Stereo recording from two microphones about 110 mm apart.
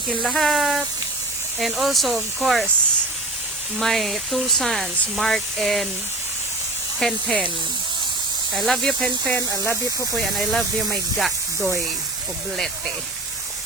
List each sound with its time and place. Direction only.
0.2 s speech: centre (ahead or behind)
3.8 s speech: centre (ahead or behind)
7.0 s speech: 5° left (ahead or behind)
8.5 s speech: centre (ahead or behind)
9.3 s speech: 20° left (ahead or behind)
10.2 s speech: centre (ahead or behind)